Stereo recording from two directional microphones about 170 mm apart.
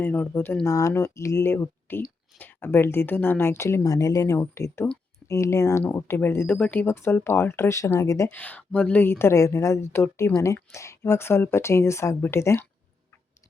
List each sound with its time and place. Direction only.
0.0 s speech: 10° left (ahead or behind)